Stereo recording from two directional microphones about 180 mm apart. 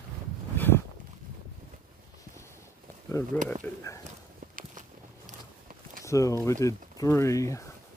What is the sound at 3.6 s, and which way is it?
Speech, 15° left (ahead or behind).